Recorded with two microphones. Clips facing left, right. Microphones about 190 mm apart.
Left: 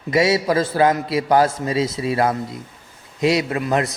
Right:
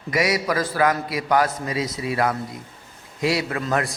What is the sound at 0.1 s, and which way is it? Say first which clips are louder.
A man's voice: left 5 dB; 25° left (ahead or behind).